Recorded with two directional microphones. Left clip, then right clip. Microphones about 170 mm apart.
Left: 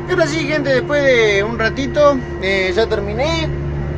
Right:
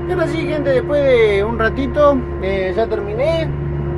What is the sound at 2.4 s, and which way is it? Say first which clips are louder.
Music: left 6 dB; 5° left (ahead or behind).